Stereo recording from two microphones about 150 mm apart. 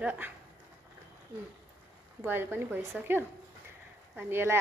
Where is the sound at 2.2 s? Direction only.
15° right (ahead or behind).